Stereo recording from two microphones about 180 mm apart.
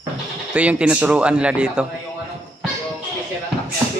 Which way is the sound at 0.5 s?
5° right (ahead or behind).